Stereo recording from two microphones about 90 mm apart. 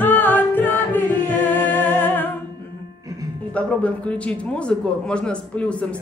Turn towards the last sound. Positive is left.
turn(degrees=10)  # may be behind; listen again after turning